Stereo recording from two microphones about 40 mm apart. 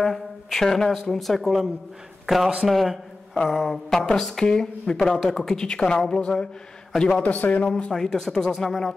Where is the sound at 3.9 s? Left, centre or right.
Centre.